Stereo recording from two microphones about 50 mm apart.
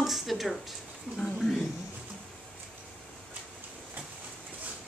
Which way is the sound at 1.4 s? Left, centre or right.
Centre.